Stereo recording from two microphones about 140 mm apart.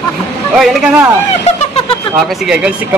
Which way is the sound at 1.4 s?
45° left (ahead or behind).